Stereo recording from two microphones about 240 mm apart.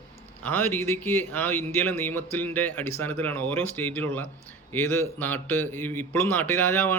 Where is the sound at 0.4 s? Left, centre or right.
Centre.